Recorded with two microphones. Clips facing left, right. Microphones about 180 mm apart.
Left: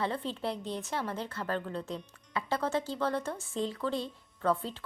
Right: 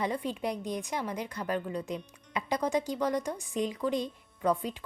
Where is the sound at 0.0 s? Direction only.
15° right (ahead or behind).